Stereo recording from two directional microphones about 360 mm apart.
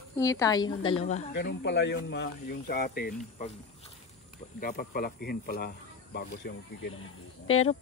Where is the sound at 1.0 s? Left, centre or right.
Left.